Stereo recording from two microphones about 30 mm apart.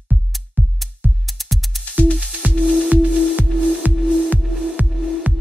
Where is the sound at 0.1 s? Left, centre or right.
Right.